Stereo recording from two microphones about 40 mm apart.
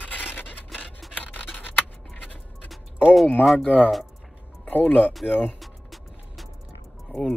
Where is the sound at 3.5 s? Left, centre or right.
Left.